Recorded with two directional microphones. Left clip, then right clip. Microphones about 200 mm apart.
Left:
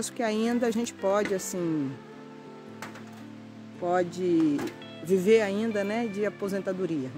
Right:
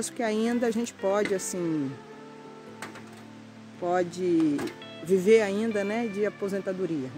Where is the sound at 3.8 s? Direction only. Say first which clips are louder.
Even; 5° left (ahead or behind).